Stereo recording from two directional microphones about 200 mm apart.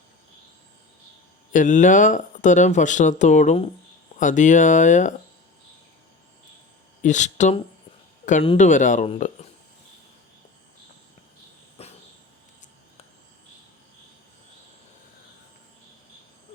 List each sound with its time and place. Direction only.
1.5 s speech: 40° left (ahead or behind)
7.0 s speech: 35° left (ahead or behind)
11.8 s cricket: 30° left (ahead or behind)